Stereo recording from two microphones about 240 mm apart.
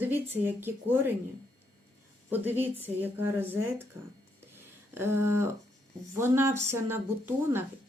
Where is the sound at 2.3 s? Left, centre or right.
Centre.